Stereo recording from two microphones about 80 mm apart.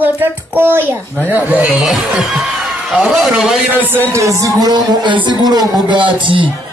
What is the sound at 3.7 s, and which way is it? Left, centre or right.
Speech, right.